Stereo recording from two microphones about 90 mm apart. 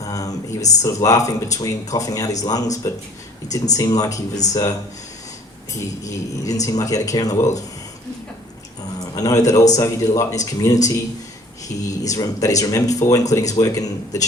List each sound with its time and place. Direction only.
0.0 s speech: 40° left (ahead or behind)
5.8 s speech: 40° left (ahead or behind)
9.1 s speech: 40° left (ahead or behind)
11.7 s speech: 30° left (ahead or behind)